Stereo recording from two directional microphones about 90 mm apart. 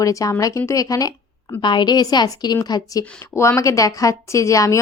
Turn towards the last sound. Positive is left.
turn(degrees=35)  # may be behind; listen again after turning